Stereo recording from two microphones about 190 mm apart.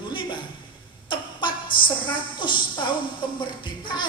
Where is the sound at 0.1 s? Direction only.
25° left (ahead or behind).